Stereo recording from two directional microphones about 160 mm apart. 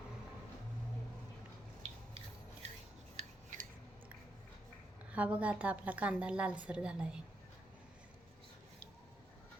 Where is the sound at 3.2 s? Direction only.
55° right (ahead or behind).